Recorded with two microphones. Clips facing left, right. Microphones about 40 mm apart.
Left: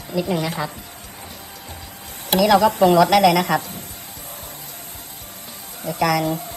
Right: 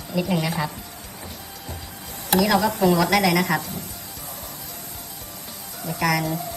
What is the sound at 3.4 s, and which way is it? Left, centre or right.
Speech, left.